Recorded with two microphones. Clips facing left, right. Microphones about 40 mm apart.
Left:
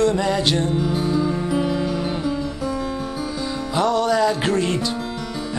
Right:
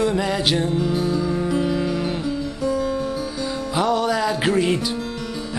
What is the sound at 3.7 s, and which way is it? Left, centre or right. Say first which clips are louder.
Music: left 2 dB; centre.